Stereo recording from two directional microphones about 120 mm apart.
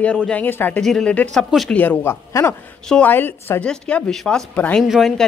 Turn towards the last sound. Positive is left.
turn(degrees=0)  # may be behind; listen again after turning